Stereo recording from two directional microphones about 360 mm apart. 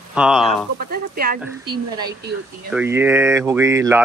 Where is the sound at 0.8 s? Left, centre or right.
Right.